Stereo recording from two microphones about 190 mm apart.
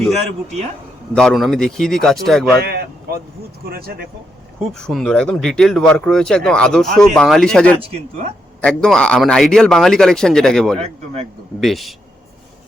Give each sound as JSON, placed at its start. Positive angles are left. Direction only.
{"t": 1.1, "sound": "speech", "side_deg": 0}
{"t": 2.6, "sound": "a sound", "side_deg": -55}
{"t": 3.7, "sound": "speech", "side_deg": -55}
{"t": 4.7, "sound": "speech", "side_deg": 0}
{"t": 10.8, "sound": "a man's voice", "side_deg": -35}
{"t": 11.6, "sound": "speech", "side_deg": 0}